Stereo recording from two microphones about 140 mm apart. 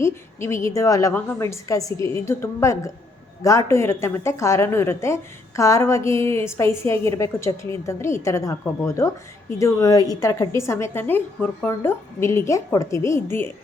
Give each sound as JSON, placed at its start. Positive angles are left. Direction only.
{"t": 0.0, "sound": "a woman's voice", "side_deg": 20}